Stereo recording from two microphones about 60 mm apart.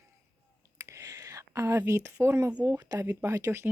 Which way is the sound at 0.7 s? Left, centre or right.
Right.